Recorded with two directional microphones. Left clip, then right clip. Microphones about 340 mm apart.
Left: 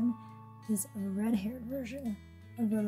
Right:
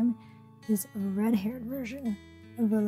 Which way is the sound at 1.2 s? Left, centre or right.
Centre.